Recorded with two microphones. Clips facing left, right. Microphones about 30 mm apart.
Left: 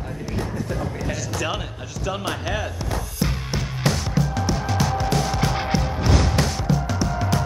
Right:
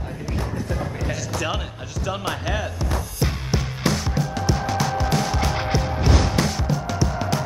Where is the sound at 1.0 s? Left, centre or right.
Centre.